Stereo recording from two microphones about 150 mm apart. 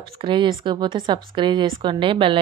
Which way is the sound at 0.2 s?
35° right (ahead or behind).